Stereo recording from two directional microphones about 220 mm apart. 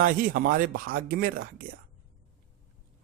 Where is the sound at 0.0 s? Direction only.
40° right (ahead or behind).